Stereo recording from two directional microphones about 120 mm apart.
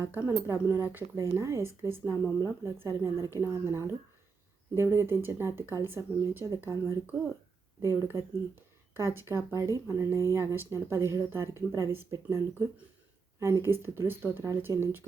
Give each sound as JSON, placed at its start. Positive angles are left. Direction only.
{"t": 0.0, "sound": "speech", "side_deg": -15}
{"t": 7.8, "sound": "speech", "side_deg": -20}